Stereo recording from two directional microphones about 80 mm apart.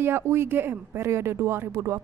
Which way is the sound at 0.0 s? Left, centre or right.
Right.